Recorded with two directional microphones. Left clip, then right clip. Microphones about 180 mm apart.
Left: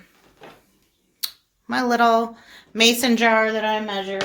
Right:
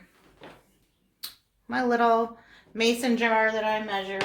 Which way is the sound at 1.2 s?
55° left (ahead or behind).